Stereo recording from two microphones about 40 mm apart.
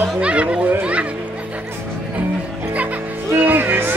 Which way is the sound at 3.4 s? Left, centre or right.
Right.